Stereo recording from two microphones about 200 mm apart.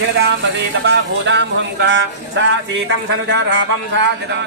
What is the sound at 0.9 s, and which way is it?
Speech, 60° right (ahead or behind).